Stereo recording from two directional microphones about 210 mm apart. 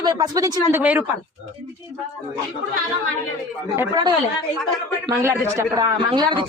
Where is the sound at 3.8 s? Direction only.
20° right (ahead or behind).